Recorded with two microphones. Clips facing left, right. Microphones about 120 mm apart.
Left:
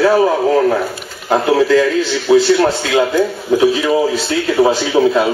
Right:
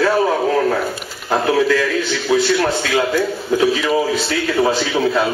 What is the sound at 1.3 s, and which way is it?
Speech, 25° left (ahead or behind).